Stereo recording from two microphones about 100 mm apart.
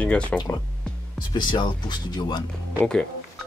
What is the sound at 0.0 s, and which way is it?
Speech, 10° left (ahead or behind).